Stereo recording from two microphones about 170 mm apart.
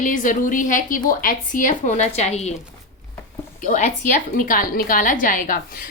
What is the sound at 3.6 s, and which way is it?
A woman's voice, 45° left (ahead or behind).